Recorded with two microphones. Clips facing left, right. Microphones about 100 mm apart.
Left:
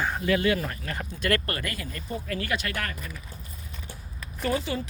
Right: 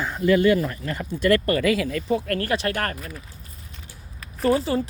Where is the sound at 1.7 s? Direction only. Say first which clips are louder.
Right 12 dB; 90° right.